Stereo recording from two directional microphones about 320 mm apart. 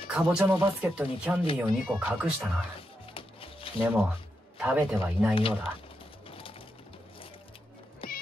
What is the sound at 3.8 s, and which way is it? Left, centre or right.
Speech, centre.